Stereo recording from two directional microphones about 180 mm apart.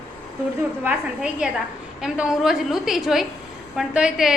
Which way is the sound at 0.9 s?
5° right (ahead or behind).